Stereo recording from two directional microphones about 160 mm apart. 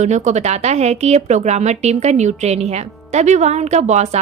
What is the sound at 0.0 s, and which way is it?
A woman's voice, 50° right (ahead or behind).